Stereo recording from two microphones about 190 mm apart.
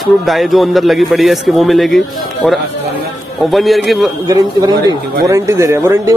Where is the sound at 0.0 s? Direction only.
Centre (ahead or behind).